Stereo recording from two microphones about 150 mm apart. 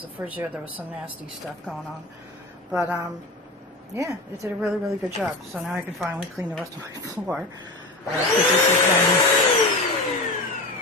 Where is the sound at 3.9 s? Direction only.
20° right (ahead or behind).